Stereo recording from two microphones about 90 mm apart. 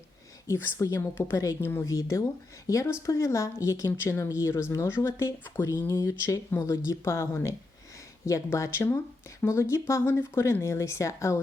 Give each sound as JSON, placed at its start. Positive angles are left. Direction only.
{"t": 0.4, "sound": "speech", "side_deg": 30}
{"t": 1.6, "sound": "speech", "side_deg": 25}
{"t": 1.9, "sound": "speech", "side_deg": 35}